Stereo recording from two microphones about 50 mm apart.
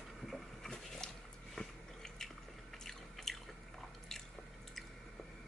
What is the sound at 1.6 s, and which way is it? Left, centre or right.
Biting, centre.